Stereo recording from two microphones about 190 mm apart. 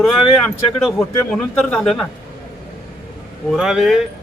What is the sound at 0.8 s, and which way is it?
A man's voice, centre (ahead or behind).